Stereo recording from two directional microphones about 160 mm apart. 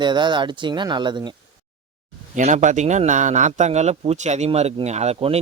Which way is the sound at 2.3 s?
50° right (ahead or behind).